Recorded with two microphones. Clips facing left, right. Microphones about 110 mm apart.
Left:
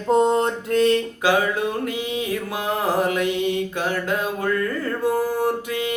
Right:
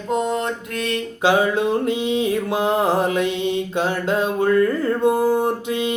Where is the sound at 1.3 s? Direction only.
25° right (ahead or behind).